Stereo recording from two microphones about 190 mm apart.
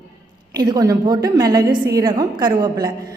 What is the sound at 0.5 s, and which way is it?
A woman's voice, 20° right (ahead or behind).